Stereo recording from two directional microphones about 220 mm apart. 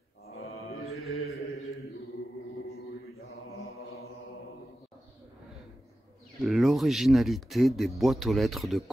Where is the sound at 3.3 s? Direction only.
70° left (ahead or behind).